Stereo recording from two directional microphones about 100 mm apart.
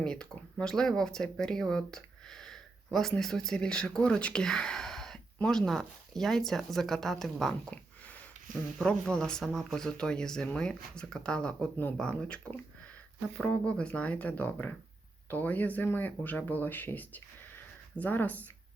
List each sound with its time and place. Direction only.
0.0 s speech: 10° left (ahead or behind)
8.8 s speech: 10° left (ahead or behind)